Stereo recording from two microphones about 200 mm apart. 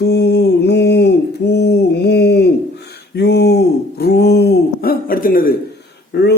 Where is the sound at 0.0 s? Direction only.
55° left (ahead or behind).